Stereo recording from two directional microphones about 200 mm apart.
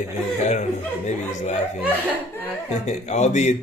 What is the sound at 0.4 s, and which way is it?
Speech, 35° left (ahead or behind).